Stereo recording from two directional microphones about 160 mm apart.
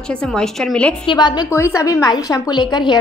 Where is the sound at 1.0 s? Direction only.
30° left (ahead or behind).